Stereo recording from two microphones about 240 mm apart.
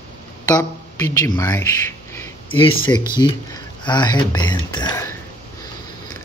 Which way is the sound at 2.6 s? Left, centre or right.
Left.